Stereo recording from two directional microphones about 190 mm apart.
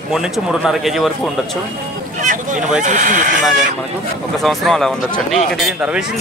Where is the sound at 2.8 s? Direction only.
40° right (ahead or behind).